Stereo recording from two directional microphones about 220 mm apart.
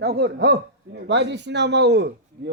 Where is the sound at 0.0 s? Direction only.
45° right (ahead or behind).